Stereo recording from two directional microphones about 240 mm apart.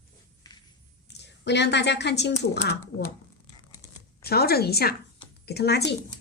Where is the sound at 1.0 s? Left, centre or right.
Left.